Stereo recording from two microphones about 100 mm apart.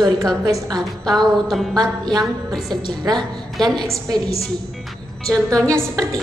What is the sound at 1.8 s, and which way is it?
Speech, 40° right (ahead or behind).